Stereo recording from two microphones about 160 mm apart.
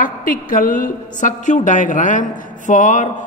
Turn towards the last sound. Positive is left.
turn(degrees=50)  # may be behind; listen again after turning